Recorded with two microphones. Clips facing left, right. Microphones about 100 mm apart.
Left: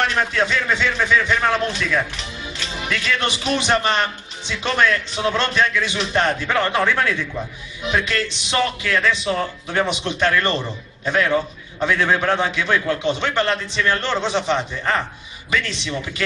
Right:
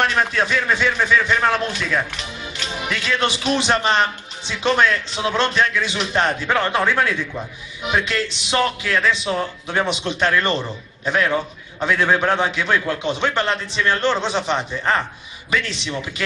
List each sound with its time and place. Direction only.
0.0 s a man's voice: 10° right (ahead or behind)